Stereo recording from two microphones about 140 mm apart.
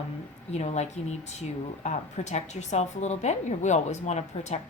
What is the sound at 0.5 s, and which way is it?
A woman's voice, 55° left (ahead or behind).